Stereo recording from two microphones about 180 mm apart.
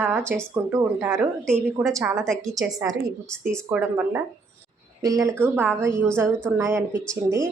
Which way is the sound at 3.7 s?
10° right (ahead or behind).